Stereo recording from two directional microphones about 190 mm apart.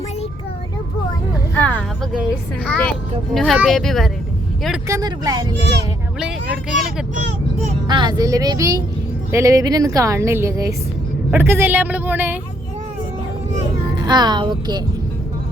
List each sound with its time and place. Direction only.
1.5 s music: 10° left (ahead or behind)
2.6 s speech: 5° left (ahead or behind)
4.9 s speech: 20° right (ahead or behind)
6.1 s speech: 5° right (ahead or behind)
7.9 s a woman's voice: 25° right (ahead or behind)
13.9 s speech: 20° right (ahead or behind)